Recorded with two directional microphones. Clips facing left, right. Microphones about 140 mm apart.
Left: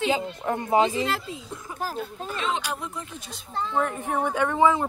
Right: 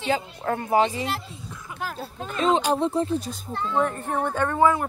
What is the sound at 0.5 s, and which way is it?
Speech, 20° left (ahead or behind).